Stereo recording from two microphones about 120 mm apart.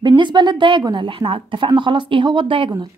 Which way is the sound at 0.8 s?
40° right (ahead or behind).